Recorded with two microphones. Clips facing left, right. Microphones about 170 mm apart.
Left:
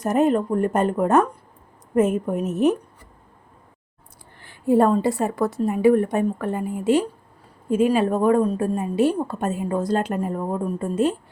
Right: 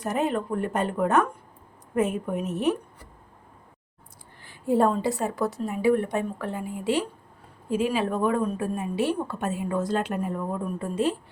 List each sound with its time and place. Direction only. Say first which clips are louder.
0.0 s a woman's voice: left 7 dB; 45° left (ahead or behind)
4.4 s a woman's voice: left 5 dB; 60° left (ahead or behind); by 10.8 s 40° left (ahead or behind)